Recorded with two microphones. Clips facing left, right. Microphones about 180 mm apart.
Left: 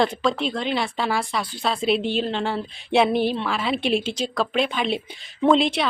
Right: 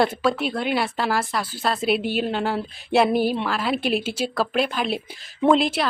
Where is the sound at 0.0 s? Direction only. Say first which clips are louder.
Right 1 dB; 5° right (ahead or behind).